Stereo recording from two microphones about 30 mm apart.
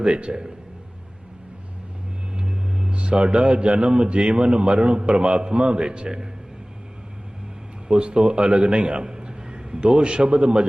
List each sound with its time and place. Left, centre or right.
0.0 s a man's voice: right
2.3 s vehicle: right
2.9 s a man's voice: right
7.9 s a man's voice: right